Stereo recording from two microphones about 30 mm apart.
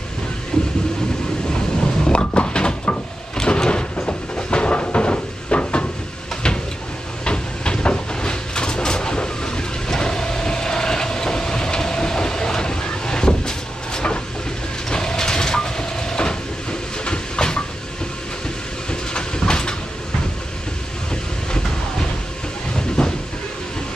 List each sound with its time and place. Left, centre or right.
0.5 s vehicle: left
1.8 s a sound: left
3.4 s sliding door: left
3.9 s cupboard open or close: left
7.2 s a sound: left
8.2 s vehicle: left
14.9 s train: left
18.9 s train: left
23.0 s a sound: left